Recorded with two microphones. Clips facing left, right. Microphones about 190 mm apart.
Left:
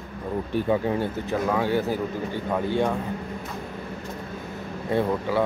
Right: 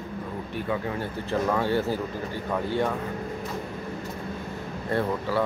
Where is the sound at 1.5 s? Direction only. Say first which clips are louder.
Left 2 dB; 10° left (ahead or behind).